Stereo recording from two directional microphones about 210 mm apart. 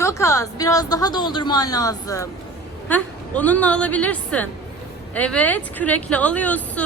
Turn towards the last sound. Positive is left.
turn(degrees=5)  # may be behind; listen again after turning